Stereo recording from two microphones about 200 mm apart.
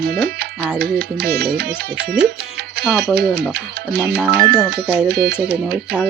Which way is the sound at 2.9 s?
55° right (ahead or behind).